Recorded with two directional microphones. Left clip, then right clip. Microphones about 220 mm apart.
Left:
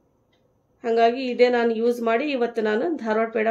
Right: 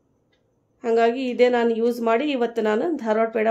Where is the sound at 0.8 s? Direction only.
25° right (ahead or behind).